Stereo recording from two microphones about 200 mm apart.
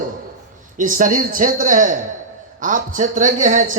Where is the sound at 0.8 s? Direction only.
40° right (ahead or behind).